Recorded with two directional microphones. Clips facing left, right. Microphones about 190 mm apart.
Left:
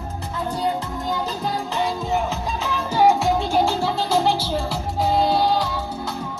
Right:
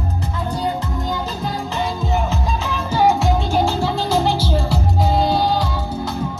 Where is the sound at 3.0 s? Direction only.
10° left (ahead or behind).